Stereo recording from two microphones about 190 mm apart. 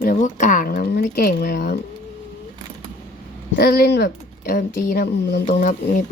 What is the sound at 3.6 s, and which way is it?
Speech, 55° left (ahead or behind).